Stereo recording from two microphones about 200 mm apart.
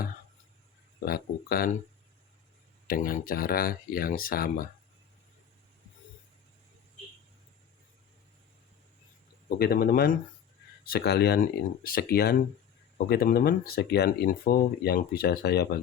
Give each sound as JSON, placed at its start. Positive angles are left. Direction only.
{"t": 1.0, "sound": "speech", "side_deg": 50}
{"t": 2.8, "sound": "speech", "side_deg": 45}
{"t": 9.6, "sound": "speech", "side_deg": 50}